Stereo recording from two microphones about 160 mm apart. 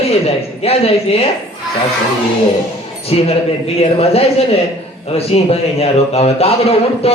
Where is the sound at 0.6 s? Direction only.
40° left (ahead or behind).